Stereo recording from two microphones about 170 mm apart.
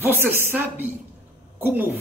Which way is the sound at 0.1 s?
15° right (ahead or behind).